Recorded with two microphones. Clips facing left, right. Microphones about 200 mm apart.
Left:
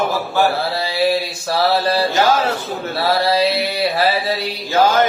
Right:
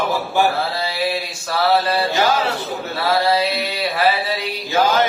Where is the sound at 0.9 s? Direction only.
40° left (ahead or behind).